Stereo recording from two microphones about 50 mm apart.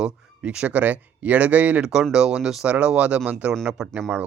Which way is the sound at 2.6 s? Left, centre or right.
Right.